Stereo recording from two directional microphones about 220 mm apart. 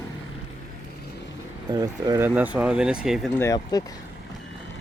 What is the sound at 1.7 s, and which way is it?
Speech, 15° right (ahead or behind).